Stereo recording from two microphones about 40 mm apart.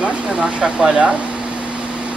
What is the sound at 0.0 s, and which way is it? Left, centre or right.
Speech, right.